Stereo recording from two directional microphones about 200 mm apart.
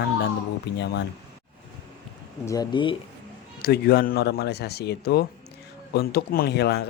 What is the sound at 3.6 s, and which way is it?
Speech, 50° left (ahead or behind).